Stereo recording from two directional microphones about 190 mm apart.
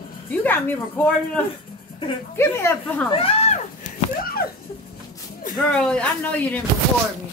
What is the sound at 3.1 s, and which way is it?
Speech, 30° left (ahead or behind).